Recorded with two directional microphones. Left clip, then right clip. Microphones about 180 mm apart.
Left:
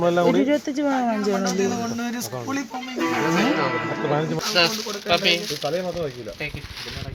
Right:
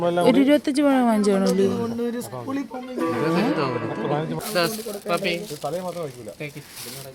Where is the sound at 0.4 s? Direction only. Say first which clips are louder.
Right 3 dB; 50° right (ahead or behind).